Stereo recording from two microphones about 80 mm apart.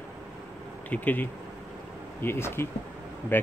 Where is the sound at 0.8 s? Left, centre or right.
Left.